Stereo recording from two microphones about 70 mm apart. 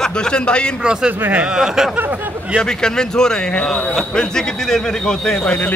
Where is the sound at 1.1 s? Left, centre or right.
Right.